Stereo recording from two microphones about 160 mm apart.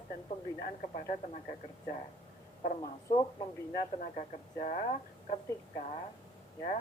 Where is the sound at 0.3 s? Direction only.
45° left (ahead or behind).